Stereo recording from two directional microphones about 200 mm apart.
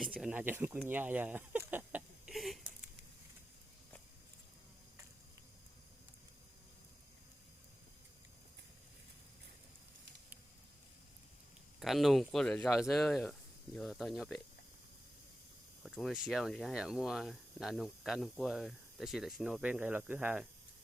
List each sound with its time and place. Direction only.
0.0 s speech: 5° right (ahead or behind)
0.9 s a sound: 10° right (ahead or behind)
11.8 s speech: centre (ahead or behind)
15.8 s speech: centre (ahead or behind)